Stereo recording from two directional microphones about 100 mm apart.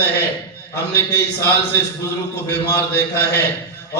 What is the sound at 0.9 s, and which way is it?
Speech, 30° left (ahead or behind).